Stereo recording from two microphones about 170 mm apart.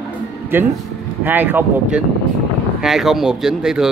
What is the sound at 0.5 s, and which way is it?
Speech, 10° right (ahead or behind).